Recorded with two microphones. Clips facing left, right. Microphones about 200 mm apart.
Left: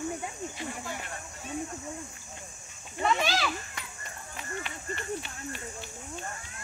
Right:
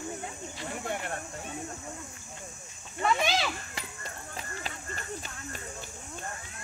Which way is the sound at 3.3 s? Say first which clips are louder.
Even; 25° right (ahead or behind).